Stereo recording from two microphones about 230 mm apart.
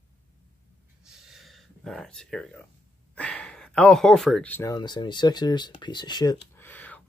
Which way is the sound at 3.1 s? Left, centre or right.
Centre.